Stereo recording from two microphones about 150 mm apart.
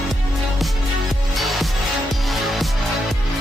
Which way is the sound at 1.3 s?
Centre (ahead or behind).